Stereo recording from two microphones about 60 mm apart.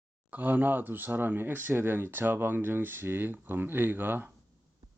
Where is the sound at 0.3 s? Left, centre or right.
Right.